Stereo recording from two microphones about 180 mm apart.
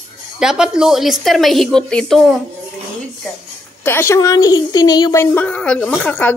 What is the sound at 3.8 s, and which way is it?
Speech, 15° left (ahead or behind).